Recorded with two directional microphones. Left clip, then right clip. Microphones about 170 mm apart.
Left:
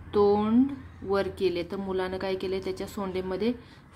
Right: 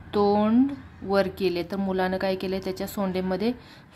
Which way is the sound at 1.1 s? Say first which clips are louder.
Right 3 dB; 20° right (ahead or behind).